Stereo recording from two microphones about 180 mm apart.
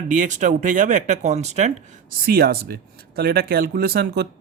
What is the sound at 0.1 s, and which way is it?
Speech, 45° right (ahead or behind).